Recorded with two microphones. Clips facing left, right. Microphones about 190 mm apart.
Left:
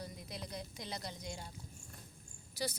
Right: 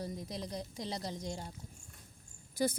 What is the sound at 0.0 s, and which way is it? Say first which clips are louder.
A woman's voice: right 6 dB; 35° right (ahead or behind).